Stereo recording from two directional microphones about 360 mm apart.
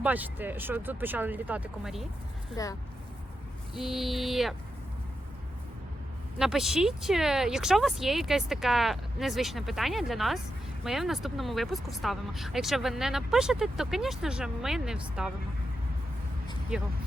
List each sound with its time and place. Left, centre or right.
0.0 s speech: centre
2.5 s speech: centre
3.8 s speech: centre
6.4 s speech: centre
16.7 s speech: centre